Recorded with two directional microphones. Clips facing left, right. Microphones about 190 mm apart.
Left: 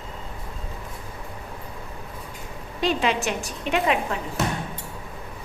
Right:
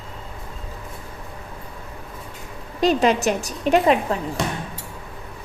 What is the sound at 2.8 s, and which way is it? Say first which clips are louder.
A woman's voice: right 6 dB; 40° right (ahead or behind).